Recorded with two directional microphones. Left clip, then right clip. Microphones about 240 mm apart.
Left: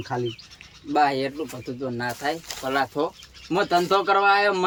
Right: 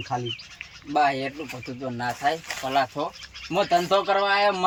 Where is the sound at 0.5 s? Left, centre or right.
Centre.